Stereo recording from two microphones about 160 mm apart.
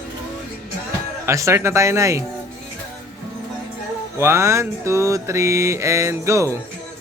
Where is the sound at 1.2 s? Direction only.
20° right (ahead or behind).